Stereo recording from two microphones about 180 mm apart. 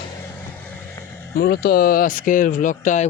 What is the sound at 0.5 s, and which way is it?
Vehicle, 10° left (ahead or behind).